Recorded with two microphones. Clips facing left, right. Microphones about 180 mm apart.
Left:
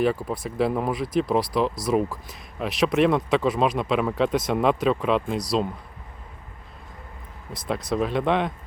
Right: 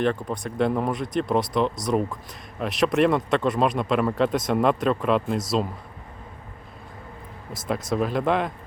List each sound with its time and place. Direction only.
0.0 s speech: 5° left (ahead or behind)
7.5 s speech: centre (ahead or behind)